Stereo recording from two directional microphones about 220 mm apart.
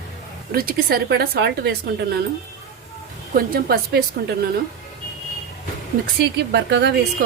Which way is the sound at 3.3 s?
45° right (ahead or behind).